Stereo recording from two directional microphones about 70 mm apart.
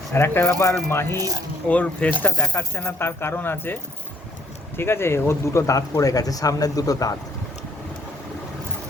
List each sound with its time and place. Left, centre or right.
0.1 s speech: left
1.6 s speech: left
4.8 s speech: left
5.6 s speech: left